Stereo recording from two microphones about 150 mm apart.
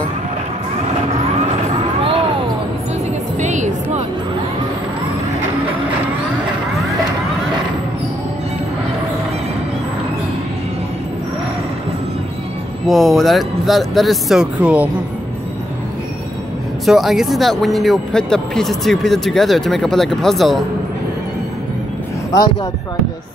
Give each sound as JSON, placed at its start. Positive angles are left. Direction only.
{"t": 3.3, "sound": "music", "side_deg": -55}
{"t": 12.8, "sound": "a man's voice", "side_deg": 0}
{"t": 16.8, "sound": "a man's voice", "side_deg": 0}